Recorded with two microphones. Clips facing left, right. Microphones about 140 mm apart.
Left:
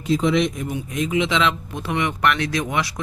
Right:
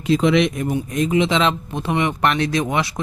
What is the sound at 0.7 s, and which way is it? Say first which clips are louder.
Speech: right 4 dB; 40° right (ahead or behind).